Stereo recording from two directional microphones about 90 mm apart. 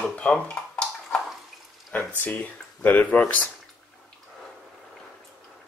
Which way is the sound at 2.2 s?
15° left (ahead or behind).